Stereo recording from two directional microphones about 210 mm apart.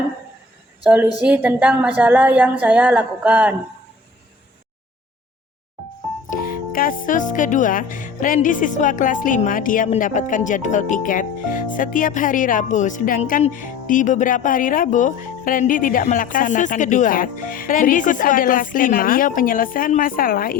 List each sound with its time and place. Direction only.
1.2 s speech: 5° right (ahead or behind)
6.7 s speech: 40° left (ahead or behind)